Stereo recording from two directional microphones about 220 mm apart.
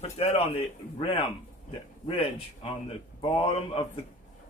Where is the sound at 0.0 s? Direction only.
30° left (ahead or behind).